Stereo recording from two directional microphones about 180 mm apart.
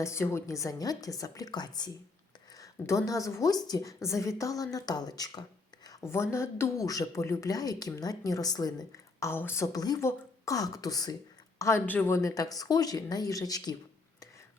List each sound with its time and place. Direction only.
0.0 s speech: 15° left (ahead or behind)